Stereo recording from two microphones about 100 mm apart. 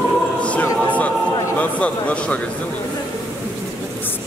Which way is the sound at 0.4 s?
15° left (ahead or behind).